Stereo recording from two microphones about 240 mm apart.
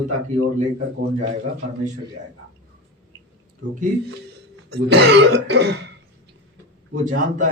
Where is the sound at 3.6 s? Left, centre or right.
Right.